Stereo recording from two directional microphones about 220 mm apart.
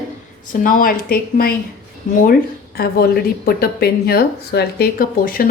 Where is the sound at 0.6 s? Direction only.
40° left (ahead or behind).